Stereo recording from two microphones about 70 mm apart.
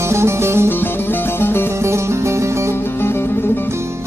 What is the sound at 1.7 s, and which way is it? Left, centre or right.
Music, right.